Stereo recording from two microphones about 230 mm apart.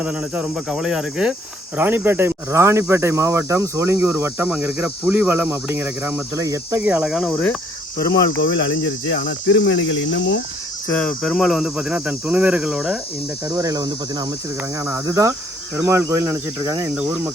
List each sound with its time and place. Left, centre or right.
0.0 s speech: centre
7.9 s cricket: left
9.1 s cricket: left
10.8 s speech: centre
13.6 s speech: centre